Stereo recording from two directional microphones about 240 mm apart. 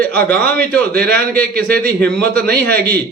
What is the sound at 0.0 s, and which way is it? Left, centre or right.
A man's voice, centre.